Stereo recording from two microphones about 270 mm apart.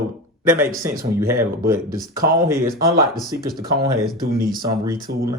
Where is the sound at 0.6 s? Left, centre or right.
Centre.